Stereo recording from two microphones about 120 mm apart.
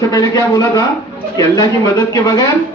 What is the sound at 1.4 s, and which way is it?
Speech, 30° left (ahead or behind).